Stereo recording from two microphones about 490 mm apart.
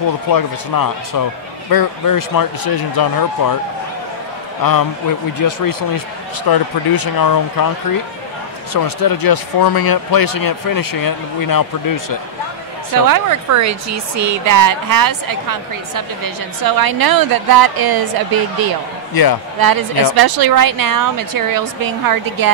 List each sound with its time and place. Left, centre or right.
0.3 s speech: left
5.4 s speech: left
8.7 s speech: left
12.9 s speech: right
19.2 s speech: left
19.6 s a woman's voice: right